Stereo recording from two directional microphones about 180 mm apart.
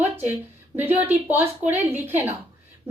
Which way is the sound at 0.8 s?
10° right (ahead or behind).